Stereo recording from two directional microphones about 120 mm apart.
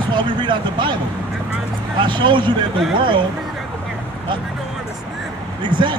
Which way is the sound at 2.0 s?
40° right (ahead or behind).